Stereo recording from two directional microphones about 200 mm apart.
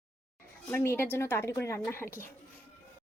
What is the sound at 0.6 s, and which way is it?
A woman's voice, 10° left (ahead or behind).